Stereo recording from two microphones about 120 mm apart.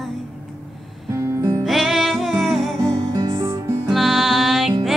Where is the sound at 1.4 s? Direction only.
25° right (ahead or behind).